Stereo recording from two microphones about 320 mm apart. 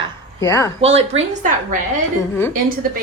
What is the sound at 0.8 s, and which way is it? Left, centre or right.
Speech, centre.